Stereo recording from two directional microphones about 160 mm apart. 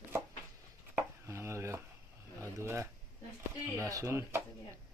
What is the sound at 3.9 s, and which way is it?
Speech, 20° right (ahead or behind).